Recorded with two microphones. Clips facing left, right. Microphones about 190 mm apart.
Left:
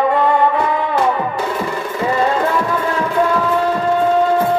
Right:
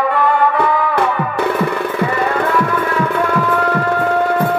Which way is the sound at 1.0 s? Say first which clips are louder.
Even; 60° right (ahead or behind).